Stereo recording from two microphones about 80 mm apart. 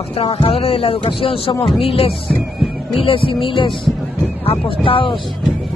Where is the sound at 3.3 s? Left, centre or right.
Left.